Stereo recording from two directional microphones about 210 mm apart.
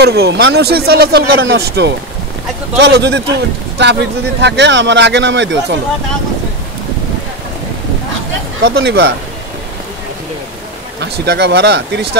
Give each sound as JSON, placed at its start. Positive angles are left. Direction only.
{"t": 0.0, "sound": "speech", "side_deg": -50}
{"t": 8.6, "sound": "speech", "side_deg": -50}
{"t": 11.0, "sound": "speech", "side_deg": -55}